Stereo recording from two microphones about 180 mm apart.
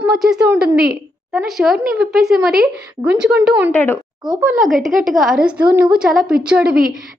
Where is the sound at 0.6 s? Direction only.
55° right (ahead or behind).